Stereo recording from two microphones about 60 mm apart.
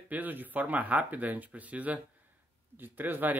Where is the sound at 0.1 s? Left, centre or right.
Right.